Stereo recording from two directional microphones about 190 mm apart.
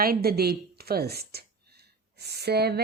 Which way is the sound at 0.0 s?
55° right (ahead or behind).